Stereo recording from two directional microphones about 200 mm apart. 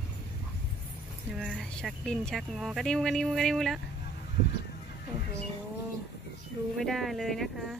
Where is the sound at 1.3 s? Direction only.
Centre (ahead or behind).